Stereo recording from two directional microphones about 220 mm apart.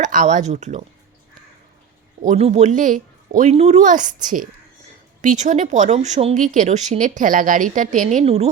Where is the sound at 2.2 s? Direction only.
30° right (ahead or behind).